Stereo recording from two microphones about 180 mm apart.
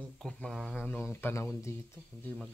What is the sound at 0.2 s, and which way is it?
Speech, 5° left (ahead or behind).